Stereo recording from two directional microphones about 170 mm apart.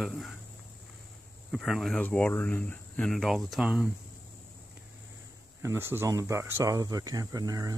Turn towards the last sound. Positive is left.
turn(degrees=-20)  # may be behind; listen again after turning